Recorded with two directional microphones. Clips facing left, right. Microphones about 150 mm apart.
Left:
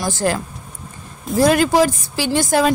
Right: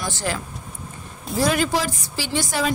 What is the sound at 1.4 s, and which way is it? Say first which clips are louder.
A woman's voice: left 7 dB; 45° left (ahead or behind).